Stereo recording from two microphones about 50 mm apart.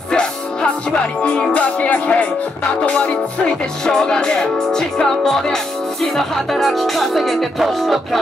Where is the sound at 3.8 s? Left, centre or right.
Centre.